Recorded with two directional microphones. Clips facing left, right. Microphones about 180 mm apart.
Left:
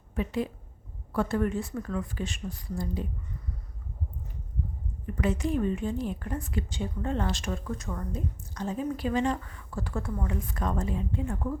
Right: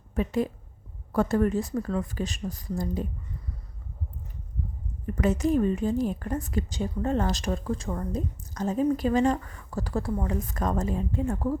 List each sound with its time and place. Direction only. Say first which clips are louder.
0.1 s a woman's voice: right 4 dB; 45° right (ahead or behind)
5.1 s a woman's voice: right 4 dB; 45° right (ahead or behind)